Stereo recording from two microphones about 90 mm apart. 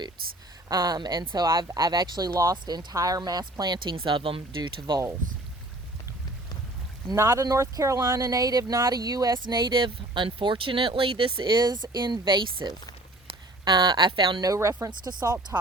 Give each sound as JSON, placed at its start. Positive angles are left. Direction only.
{"t": 0.7, "sound": "speech", "side_deg": -50}
{"t": 1.5, "sound": "speech", "side_deg": -40}
{"t": 3.9, "sound": "speech", "side_deg": -70}
{"t": 7.2, "sound": "speech", "side_deg": -35}
{"t": 14.4, "sound": "speech", "side_deg": -40}